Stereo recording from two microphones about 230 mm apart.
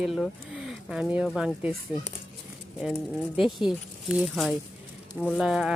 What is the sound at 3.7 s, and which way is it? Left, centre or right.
Speech, centre.